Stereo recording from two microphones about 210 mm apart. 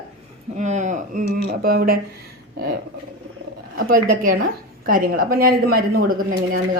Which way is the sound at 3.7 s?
50° right (ahead or behind).